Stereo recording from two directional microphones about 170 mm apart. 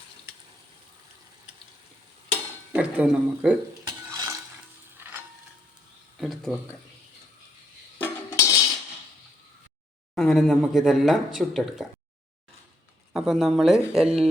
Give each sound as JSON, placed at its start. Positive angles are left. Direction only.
{"t": 2.7, "sound": "speech", "side_deg": -5}
{"t": 3.8, "sound": "stir", "side_deg": -20}
{"t": 4.9, "sound": "music", "side_deg": -10}
{"t": 6.1, "sound": "a sound", "side_deg": 0}
{"t": 7.9, "sound": "cutlery", "side_deg": 15}
{"t": 10.2, "sound": "speech", "side_deg": 0}
{"t": 13.1, "sound": "speech", "side_deg": 0}